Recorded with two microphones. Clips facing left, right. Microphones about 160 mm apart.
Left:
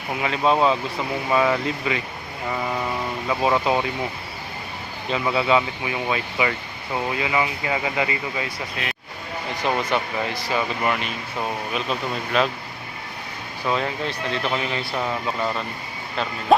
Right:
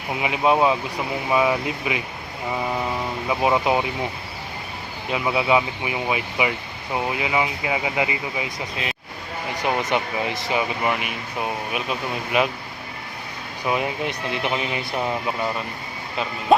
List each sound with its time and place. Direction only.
0.2 s speech: 15° right (ahead or behind)
5.1 s speech: 10° right (ahead or behind)
13.7 s speech: 15° right (ahead or behind)
16.5 s music: centre (ahead or behind)